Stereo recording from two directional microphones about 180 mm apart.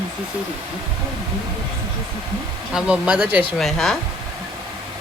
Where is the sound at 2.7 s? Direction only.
5° right (ahead or behind).